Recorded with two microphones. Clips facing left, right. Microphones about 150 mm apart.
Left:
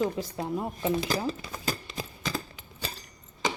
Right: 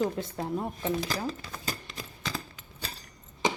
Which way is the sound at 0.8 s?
20° left (ahead or behind).